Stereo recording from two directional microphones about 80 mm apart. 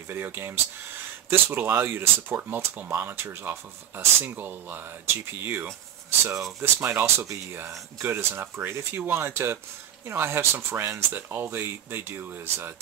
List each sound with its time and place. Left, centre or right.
0.1 s speech: right
6.0 s speech: right